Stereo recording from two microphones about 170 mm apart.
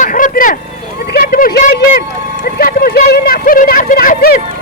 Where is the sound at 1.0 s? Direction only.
65° left (ahead or behind).